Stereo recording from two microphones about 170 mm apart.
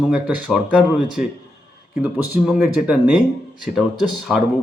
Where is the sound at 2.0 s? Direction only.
5° right (ahead or behind).